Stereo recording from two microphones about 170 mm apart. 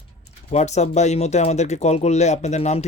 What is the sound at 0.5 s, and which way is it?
Speech, 40° left (ahead or behind).